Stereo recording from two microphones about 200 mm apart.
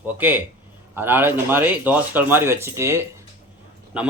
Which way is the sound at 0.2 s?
10° right (ahead or behind).